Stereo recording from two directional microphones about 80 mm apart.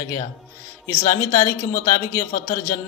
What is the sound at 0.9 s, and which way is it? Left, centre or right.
Speech, left.